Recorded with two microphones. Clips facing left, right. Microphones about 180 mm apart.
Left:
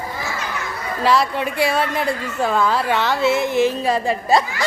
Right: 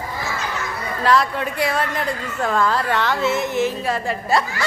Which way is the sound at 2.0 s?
10° left (ahead or behind).